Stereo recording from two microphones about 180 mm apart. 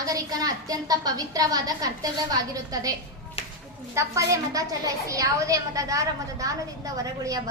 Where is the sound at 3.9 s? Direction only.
15° right (ahead or behind).